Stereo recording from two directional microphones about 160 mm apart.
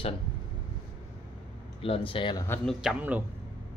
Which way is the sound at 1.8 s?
35° left (ahead or behind).